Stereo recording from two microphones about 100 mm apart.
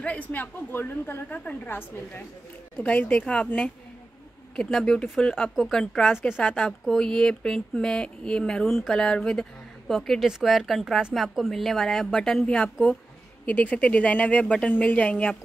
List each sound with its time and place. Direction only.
0.0 s a woman's voice: 15° left (ahead or behind)